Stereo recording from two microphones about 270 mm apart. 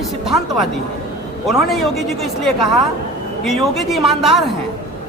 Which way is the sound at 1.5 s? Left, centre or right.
Centre.